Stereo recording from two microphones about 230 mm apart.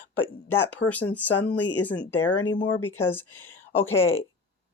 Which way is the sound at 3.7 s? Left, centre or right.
Centre.